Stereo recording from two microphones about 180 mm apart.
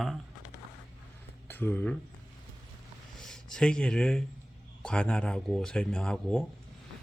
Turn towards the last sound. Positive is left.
turn(degrees=0)  # may be behind; listen again after turning